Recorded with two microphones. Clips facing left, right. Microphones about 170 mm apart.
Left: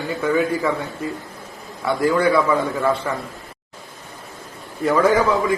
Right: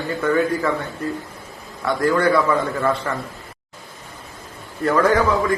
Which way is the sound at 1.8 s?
5° left (ahead or behind).